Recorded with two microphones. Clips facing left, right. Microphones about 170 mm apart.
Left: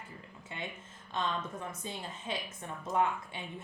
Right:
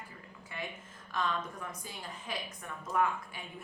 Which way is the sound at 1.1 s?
25° left (ahead or behind).